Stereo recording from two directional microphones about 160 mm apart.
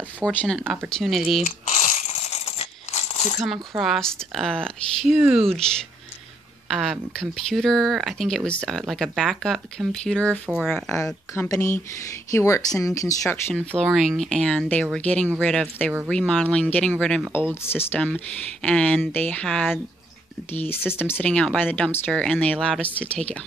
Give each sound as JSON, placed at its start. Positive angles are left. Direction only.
{"t": 0.3, "sound": "speech", "side_deg": 5}
{"t": 1.4, "sound": "crumpling", "side_deg": 45}
{"t": 3.7, "sound": "speech", "side_deg": 0}
{"t": 5.1, "sound": "speech", "side_deg": -10}
{"t": 6.7, "sound": "speech", "side_deg": 0}
{"t": 11.3, "sound": "speech", "side_deg": 20}
{"t": 17.6, "sound": "speech", "side_deg": 10}
{"t": 20.5, "sound": "speech", "side_deg": 15}